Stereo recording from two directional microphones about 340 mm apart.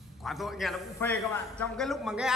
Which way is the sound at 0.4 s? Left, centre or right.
Centre.